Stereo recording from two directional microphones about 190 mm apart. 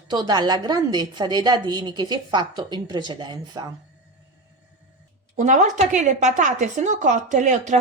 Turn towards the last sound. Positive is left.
turn(degrees=-40)  # may be behind; listen again after turning